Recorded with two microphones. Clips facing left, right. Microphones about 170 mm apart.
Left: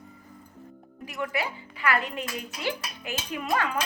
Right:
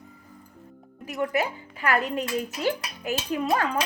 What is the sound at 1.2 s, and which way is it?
Speech, 45° right (ahead or behind).